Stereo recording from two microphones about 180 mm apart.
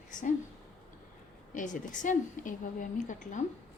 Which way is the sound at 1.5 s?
45° left (ahead or behind).